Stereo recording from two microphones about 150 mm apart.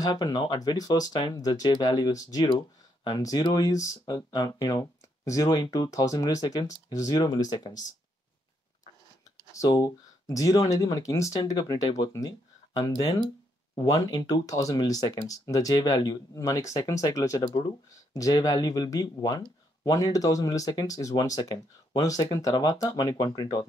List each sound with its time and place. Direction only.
0.0 s speech: 25° left (ahead or behind)
9.5 s speech: 25° left (ahead or behind)